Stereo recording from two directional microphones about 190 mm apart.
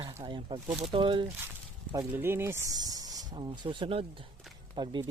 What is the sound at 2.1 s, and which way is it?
Speech, 10° right (ahead or behind).